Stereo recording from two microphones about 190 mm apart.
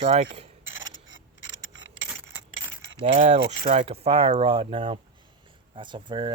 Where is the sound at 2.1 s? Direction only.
10° right (ahead or behind).